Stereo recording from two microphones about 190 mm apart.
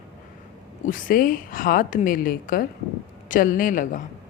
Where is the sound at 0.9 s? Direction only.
45° left (ahead or behind).